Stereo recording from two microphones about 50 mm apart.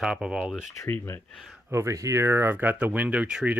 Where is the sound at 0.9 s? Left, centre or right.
Left.